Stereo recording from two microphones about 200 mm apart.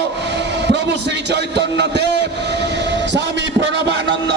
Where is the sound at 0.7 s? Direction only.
60° right (ahead or behind).